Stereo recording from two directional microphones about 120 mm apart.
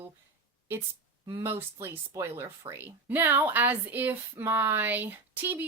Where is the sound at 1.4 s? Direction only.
20° right (ahead or behind).